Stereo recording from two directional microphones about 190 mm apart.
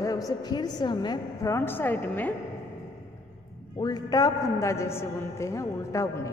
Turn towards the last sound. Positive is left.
turn(degrees=15)  # may be behind; listen again after turning